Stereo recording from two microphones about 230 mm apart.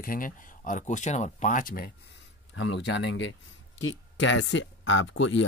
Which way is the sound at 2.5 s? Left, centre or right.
Left.